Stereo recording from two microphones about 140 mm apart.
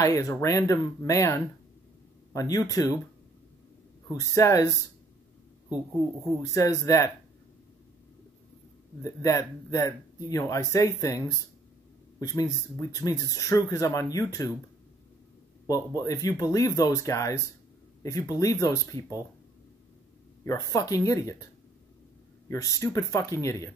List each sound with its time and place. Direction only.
0.0 s speech: 20° left (ahead or behind)
4.1 s speech: 20° left (ahead or behind)
6.4 s speech: 25° left (ahead or behind)
9.0 s speech: 25° left (ahead or behind)
15.6 s speech: 25° left (ahead or behind)
20.4 s speech: 25° left (ahead or behind)
22.5 s speech: 20° left (ahead or behind)